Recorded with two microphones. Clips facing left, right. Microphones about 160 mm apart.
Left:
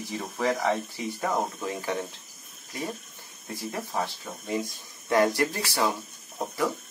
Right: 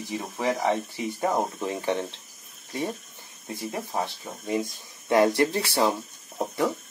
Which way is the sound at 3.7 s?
20° right (ahead or behind).